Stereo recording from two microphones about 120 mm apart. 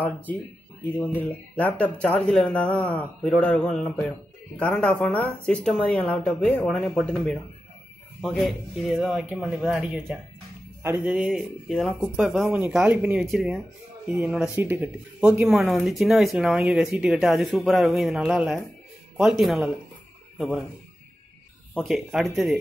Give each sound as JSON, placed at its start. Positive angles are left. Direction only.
{"t": 0.0, "sound": "speech", "side_deg": 15}
{"t": 10.8, "sound": "speech", "side_deg": -20}
{"t": 11.1, "sound": "speech", "side_deg": -5}
{"t": 12.5, "sound": "speech", "side_deg": -15}
{"t": 15.4, "sound": "speech", "side_deg": 0}
{"t": 21.8, "sound": "speech", "side_deg": 0}